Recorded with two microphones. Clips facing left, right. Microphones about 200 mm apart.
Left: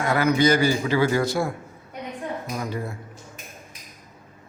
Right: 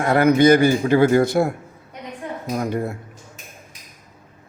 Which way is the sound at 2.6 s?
60° right (ahead or behind).